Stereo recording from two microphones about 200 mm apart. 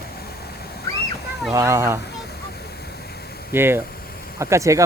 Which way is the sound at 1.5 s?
15° right (ahead or behind).